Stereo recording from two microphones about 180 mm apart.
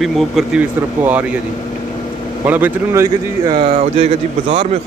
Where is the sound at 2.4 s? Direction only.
10° right (ahead or behind); by 4.1 s 35° right (ahead or behind).